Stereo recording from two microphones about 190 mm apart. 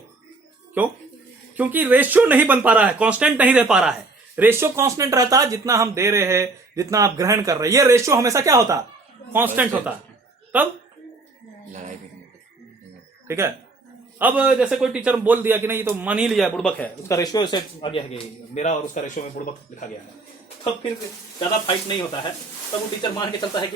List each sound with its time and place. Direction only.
1.5 s speech: 10° right (ahead or behind)
11.7 s a sound: 40° right (ahead or behind)
13.2 s speech: 15° right (ahead or behind); by 19.2 s 40° left (ahead or behind)
23.0 s speech: 25° left (ahead or behind)